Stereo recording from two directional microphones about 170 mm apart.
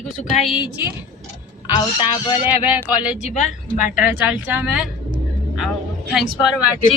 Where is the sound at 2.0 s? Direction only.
30° left (ahead or behind).